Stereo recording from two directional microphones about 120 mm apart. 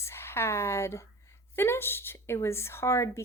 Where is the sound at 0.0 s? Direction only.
20° left (ahead or behind).